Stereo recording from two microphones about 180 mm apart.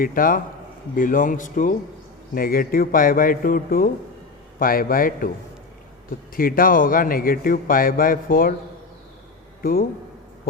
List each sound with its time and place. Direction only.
0.0 s a man's voice: 50° left (ahead or behind)
6.3 s a man's voice: 50° left (ahead or behind)